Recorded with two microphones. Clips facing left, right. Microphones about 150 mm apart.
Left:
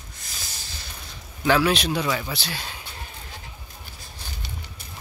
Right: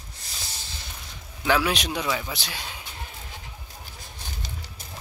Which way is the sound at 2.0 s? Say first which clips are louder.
Left 2 dB; 5° right (ahead or behind).